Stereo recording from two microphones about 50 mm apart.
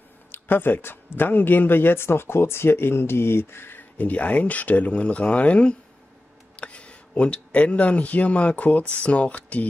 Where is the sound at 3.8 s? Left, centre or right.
Left.